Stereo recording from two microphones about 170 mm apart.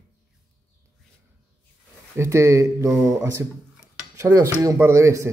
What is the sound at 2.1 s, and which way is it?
A man's voice, 15° right (ahead or behind).